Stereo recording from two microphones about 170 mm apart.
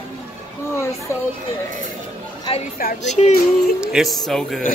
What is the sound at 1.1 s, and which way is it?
Speech, 15° left (ahead or behind).